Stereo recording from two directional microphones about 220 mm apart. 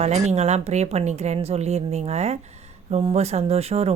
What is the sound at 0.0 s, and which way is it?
Speech, 30° right (ahead or behind).